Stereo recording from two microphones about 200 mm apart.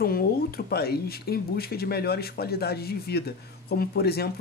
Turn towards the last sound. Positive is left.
turn(degrees=50)  # may be behind; listen again after turning